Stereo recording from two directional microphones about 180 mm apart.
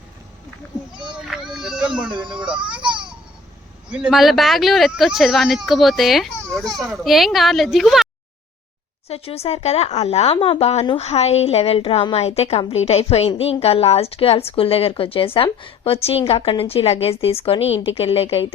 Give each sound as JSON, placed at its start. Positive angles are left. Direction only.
{"t": 1.1, "sound": "baby cry", "side_deg": 0}
{"t": 3.8, "sound": "speech", "side_deg": -5}
{"t": 9.0, "sound": "a woman's voice", "side_deg": 35}